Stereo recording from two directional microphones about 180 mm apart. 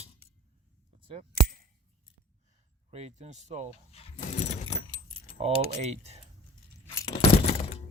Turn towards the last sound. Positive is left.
turn(degrees=35)  # may be behind; listen again after turning